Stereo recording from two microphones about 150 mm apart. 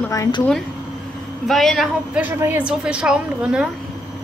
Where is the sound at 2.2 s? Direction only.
10° right (ahead or behind).